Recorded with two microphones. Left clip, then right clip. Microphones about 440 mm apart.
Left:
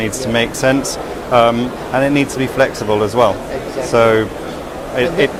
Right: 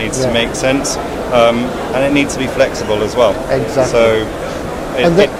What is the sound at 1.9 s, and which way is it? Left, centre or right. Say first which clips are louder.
Speech: even; left.